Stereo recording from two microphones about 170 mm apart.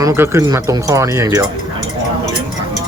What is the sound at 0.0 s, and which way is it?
Speech, 15° right (ahead or behind).